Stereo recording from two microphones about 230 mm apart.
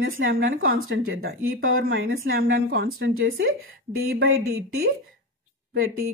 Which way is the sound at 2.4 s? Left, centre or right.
Right.